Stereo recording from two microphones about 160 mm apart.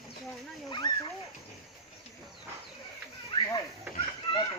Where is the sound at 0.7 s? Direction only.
25° left (ahead or behind).